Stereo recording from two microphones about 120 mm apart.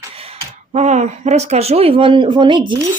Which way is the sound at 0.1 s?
50° right (ahead or behind).